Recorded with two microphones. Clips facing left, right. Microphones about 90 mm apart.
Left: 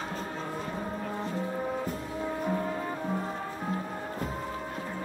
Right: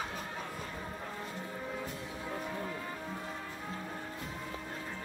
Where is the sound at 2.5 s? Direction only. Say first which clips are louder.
Left 8 dB; 40° left (ahead or behind).